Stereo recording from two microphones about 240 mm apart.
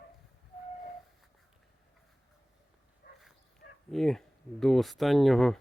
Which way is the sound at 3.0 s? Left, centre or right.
Left.